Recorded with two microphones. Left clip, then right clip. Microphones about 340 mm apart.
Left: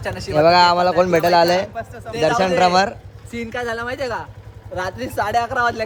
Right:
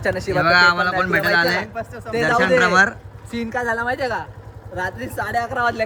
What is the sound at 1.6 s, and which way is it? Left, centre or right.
Speech, right.